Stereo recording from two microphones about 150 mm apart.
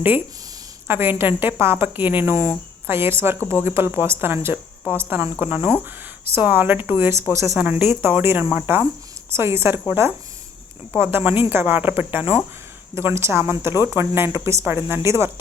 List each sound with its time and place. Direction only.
0.9 s a woman's voice: 15° right (ahead or behind)